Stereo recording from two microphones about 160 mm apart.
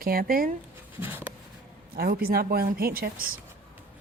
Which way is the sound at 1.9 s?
70° right (ahead or behind).